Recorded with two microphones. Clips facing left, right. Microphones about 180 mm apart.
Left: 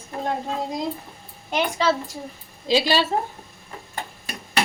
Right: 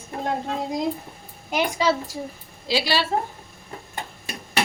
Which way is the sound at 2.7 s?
20° left (ahead or behind).